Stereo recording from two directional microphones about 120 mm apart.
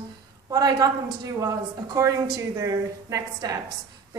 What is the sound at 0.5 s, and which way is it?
A woman's voice, 35° right (ahead or behind).